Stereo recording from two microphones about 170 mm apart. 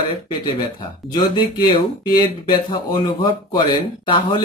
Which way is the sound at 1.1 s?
25° left (ahead or behind).